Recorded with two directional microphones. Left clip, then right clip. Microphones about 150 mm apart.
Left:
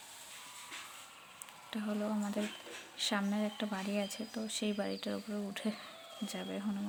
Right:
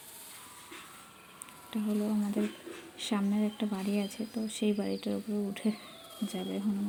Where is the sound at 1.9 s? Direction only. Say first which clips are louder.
Right 4 dB; 30° left (ahead or behind).